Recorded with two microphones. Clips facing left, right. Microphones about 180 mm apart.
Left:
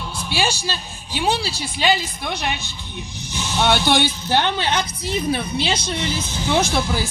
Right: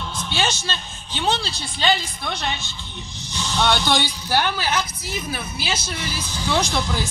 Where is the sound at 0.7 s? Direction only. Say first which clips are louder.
Left 2 dB; 10° left (ahead or behind).